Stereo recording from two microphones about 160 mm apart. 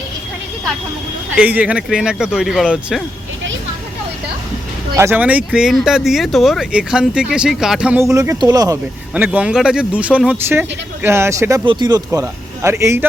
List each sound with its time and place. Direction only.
1.4 s speech: 10° right (ahead or behind)
4.9 s speech: 15° right (ahead or behind)
8.0 s a man's voice: 20° right (ahead or behind)
9.1 s speech: 10° right (ahead or behind)
11.6 s a man's voice: 30° right (ahead or behind)